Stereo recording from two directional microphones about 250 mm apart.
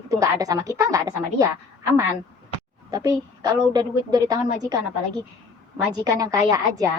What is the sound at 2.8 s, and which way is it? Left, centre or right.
A woman's voice, centre.